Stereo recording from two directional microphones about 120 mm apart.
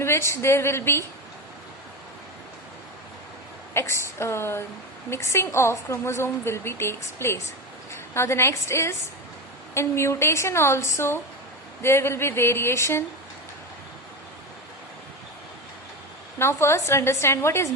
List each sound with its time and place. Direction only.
0.0 s a woman's voice: 20° left (ahead or behind)
3.8 s a woman's voice: 20° left (ahead or behind)
16.4 s a woman's voice: 20° left (ahead or behind)